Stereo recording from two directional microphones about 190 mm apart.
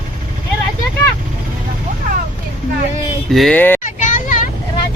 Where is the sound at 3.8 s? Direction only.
45° left (ahead or behind).